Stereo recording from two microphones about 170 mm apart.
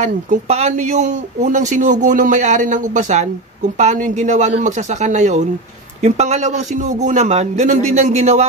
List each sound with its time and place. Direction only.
0.0 s a man's voice: 40° right (ahead or behind)